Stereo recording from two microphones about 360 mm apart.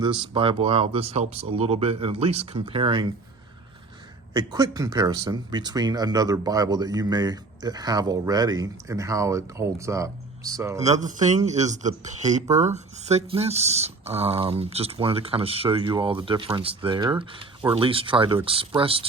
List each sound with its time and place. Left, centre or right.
0.0 s speech: centre
4.4 s speech: centre
10.8 s speech: centre